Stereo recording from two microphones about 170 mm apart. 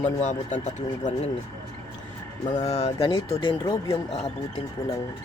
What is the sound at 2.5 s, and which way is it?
Speech, 40° left (ahead or behind).